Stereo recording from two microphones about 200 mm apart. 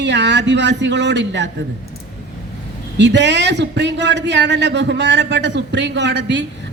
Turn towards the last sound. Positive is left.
turn(degrees=-60)  # may be behind; listen again after turning